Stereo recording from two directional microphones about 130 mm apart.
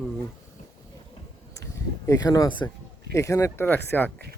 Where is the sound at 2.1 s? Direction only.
25° left (ahead or behind).